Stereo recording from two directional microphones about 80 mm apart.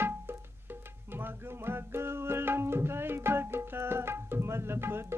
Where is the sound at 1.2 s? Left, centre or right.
Right.